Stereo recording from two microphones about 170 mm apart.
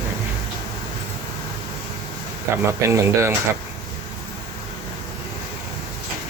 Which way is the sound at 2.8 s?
15° right (ahead or behind).